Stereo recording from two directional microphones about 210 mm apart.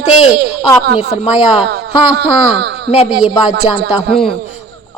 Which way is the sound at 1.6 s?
50° right (ahead or behind).